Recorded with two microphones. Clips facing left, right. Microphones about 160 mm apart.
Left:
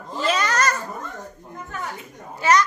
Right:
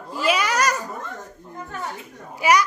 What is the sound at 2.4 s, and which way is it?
Speech, 10° right (ahead or behind).